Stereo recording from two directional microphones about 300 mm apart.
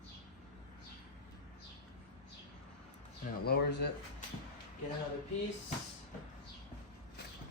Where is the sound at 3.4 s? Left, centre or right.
Left.